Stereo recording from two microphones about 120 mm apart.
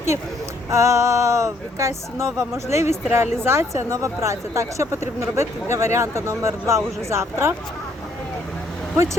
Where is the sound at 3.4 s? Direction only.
20° right (ahead or behind).